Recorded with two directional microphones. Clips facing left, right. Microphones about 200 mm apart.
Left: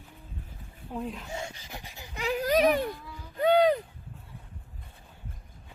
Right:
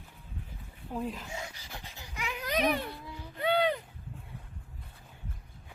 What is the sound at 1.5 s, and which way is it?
Speech, 15° left (ahead or behind).